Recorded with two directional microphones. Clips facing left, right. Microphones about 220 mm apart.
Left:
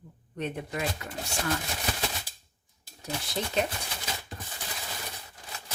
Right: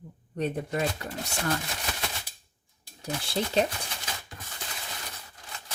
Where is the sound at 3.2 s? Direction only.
30° right (ahead or behind).